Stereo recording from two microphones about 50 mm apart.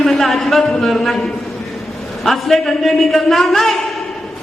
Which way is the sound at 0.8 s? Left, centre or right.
Centre.